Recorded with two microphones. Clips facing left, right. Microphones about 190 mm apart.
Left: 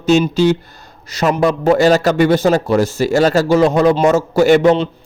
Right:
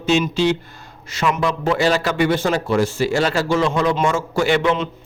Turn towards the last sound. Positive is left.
turn(degrees=40)  # may be behind; listen again after turning